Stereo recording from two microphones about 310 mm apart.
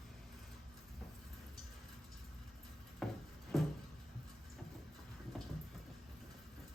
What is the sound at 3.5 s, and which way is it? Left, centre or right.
Cupboard open or close, centre.